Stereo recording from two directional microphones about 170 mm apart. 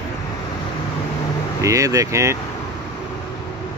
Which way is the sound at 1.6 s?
20° right (ahead or behind).